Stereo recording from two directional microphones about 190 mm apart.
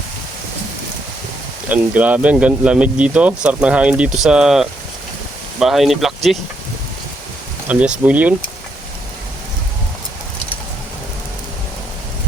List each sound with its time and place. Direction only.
1.7 s speech: 10° right (ahead or behind)
7.7 s speech: 5° right (ahead or behind)